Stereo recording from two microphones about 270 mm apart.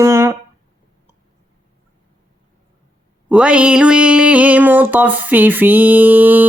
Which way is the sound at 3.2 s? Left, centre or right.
Centre.